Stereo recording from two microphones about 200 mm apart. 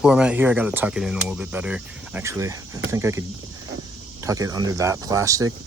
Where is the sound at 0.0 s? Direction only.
5° right (ahead or behind).